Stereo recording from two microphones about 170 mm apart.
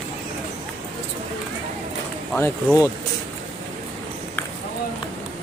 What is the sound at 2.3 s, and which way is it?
Speech, 15° left (ahead or behind).